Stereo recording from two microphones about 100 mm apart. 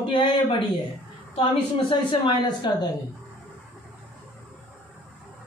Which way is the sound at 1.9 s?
55° left (ahead or behind).